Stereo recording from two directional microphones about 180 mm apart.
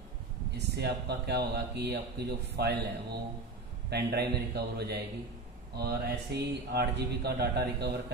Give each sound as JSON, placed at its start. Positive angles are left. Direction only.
{"t": 0.7, "sound": "speech", "side_deg": -65}